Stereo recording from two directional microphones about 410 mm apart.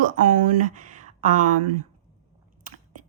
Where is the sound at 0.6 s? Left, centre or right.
Centre.